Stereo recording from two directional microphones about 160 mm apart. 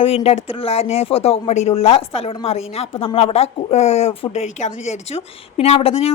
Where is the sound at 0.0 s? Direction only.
35° left (ahead or behind).